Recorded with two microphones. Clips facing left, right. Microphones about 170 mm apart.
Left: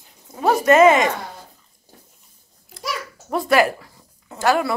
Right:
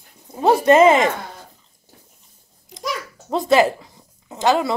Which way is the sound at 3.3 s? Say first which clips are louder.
Right 2 dB; 20° right (ahead or behind).